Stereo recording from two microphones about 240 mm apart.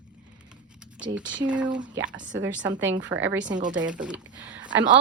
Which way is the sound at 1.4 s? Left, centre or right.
Centre.